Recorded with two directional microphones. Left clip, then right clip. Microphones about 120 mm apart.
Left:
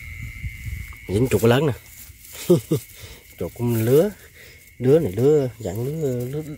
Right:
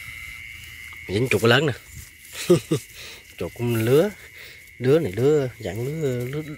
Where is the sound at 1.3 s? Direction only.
25° left (ahead or behind).